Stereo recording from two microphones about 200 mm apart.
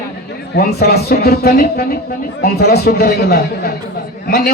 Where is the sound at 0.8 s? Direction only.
55° left (ahead or behind).